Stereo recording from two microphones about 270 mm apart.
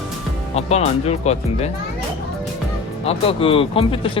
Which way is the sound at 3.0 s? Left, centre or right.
Centre.